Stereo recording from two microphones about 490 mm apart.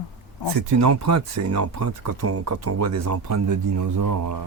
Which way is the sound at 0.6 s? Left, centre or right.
Right.